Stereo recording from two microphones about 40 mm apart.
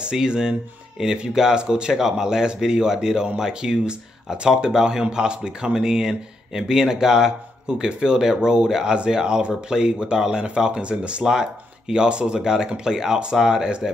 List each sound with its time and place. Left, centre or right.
0.0 s speech: right